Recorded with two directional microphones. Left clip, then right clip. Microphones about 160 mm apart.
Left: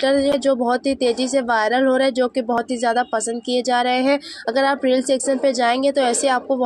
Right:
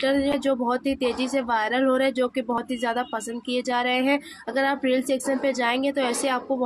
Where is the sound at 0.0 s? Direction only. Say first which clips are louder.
Left 6 dB; 35° left (ahead or behind).